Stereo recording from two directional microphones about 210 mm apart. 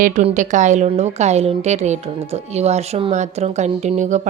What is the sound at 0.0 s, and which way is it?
A woman's voice, 35° right (ahead or behind).